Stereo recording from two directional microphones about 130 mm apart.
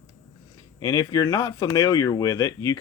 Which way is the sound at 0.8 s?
25° left (ahead or behind).